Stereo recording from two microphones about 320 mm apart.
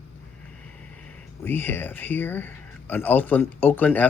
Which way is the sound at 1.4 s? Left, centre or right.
Centre.